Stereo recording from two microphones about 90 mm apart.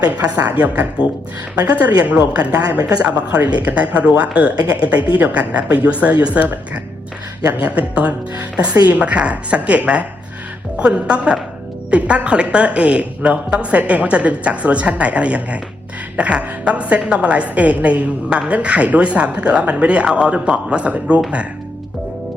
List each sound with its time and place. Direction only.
0.0 s a woman's voice: 45° right (ahead or behind)
0.6 s a woman's voice: 15° right (ahead or behind)
2.6 s a woman's voice: 45° right (ahead or behind)
3.4 s a woman's voice: 15° right (ahead or behind)